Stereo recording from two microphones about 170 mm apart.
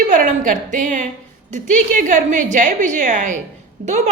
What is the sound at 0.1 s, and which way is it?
A woman's voice, 50° right (ahead or behind).